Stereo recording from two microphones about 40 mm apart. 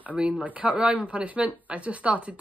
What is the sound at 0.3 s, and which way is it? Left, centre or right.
Speech, right.